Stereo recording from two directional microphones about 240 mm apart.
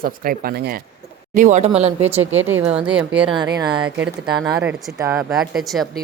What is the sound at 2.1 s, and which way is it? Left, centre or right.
Speech, centre.